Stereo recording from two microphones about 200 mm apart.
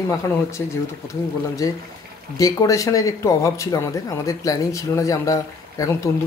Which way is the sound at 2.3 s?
15° left (ahead or behind).